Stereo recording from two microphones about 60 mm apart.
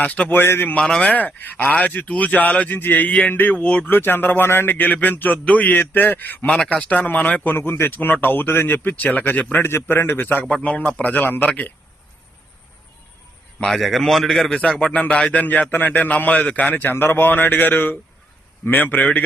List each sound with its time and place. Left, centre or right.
0.0 s speech: left
0.8 s speech: centre
1.1 s speech: left
3.8 s speech: left
7.5 s speech: left
9.6 s speech: left
10.5 s speech: left
13.7 s speech: centre; by 19.0 s left